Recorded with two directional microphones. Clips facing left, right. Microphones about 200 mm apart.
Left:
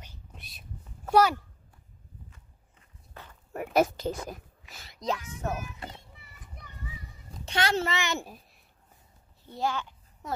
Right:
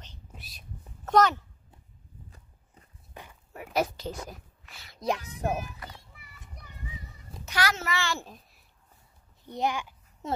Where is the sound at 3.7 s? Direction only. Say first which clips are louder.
Left 4 dB; 50° left (ahead or behind).